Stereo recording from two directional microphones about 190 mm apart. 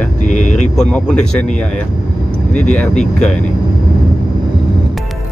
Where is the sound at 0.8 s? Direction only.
5° left (ahead or behind).